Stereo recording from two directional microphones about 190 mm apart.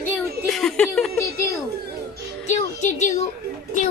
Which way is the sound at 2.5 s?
35° left (ahead or behind).